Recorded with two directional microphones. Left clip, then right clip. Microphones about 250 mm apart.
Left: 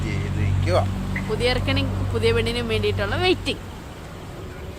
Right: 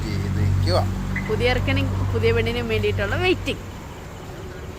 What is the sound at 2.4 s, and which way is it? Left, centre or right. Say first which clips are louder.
Speech: even; left.